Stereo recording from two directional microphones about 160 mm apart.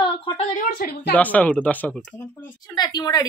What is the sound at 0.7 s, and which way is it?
Speech, 75° left (ahead or behind).